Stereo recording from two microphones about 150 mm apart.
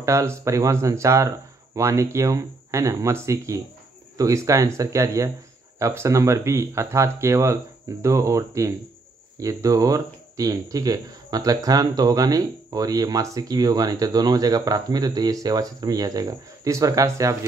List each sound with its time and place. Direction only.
0.0 s speech: 20° right (ahead or behind)